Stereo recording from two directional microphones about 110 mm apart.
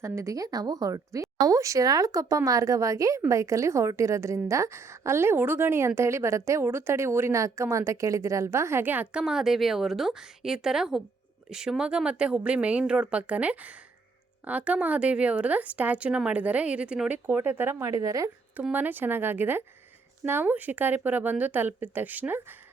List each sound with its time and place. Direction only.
0.0 s a woman's voice: 30° right (ahead or behind)
9.2 s a woman's voice: 5° right (ahead or behind); by 18.3 s 30° right (ahead or behind)
18.5 s a woman's voice: 15° right (ahead or behind)